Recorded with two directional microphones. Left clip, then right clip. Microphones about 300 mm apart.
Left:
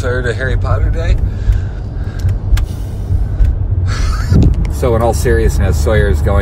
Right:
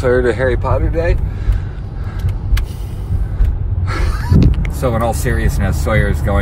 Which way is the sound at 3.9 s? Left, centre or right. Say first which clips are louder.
Right 1 dB; centre.